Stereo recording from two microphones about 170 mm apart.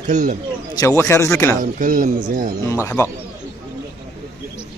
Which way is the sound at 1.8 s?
50° right (ahead or behind).